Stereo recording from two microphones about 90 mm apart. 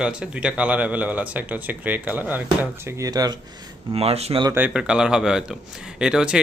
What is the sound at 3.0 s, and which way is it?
Speech, 45° right (ahead or behind).